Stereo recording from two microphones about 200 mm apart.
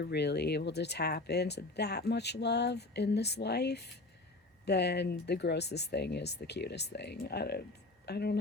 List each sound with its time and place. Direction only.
0.0 s speech: 55° left (ahead or behind)